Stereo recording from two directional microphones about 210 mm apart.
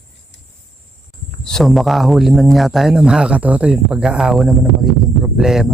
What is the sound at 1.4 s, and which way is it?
Speech, centre (ahead or behind).